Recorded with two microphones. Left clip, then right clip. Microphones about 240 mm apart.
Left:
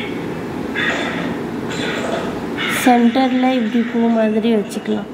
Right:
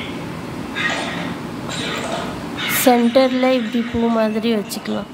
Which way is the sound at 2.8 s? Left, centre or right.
Centre.